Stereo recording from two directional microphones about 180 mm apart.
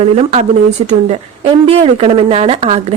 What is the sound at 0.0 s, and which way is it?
A woman's voice, 35° right (ahead or behind).